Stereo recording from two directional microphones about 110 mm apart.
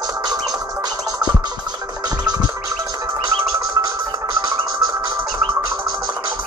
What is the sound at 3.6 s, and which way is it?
Music, 35° right (ahead or behind).